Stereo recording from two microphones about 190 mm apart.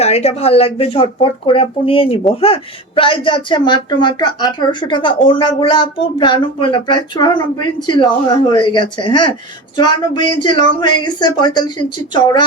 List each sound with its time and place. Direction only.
0.0 s speech: 35° left (ahead or behind)